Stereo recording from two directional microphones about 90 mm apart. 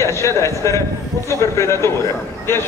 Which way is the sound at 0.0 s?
35° left (ahead or behind).